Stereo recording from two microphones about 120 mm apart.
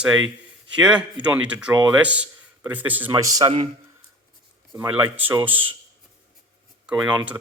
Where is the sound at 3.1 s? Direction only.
30° right (ahead or behind).